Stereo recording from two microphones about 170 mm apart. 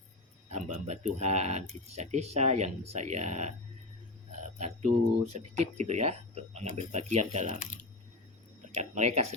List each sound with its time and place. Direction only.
0.5 s speech: 40° right (ahead or behind)
4.5 s a sound: 40° right (ahead or behind)
5.3 s speech: 35° right (ahead or behind)
8.8 s speech: 40° right (ahead or behind)